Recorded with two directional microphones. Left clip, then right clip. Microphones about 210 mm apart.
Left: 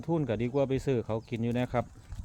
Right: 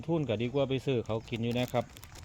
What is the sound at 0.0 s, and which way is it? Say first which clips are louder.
Speech: left 1 dB; 20° left (ahead or behind).